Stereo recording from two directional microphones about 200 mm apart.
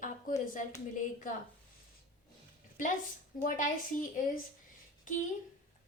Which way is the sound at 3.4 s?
40° left (ahead or behind).